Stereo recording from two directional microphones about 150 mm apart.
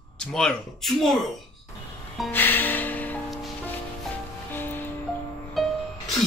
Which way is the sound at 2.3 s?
15° left (ahead or behind).